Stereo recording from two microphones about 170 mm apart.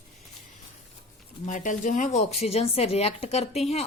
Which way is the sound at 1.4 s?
50° left (ahead or behind).